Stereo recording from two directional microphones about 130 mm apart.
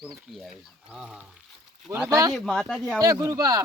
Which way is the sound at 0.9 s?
5° right (ahead or behind).